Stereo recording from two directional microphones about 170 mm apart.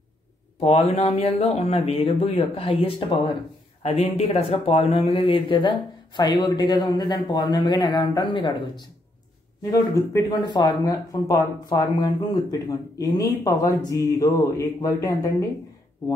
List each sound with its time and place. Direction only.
0.6 s speech: 35° left (ahead or behind); by 15.3 s 20° left (ahead or behind)